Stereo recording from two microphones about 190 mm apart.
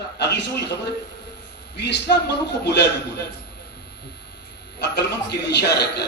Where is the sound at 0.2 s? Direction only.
65° left (ahead or behind).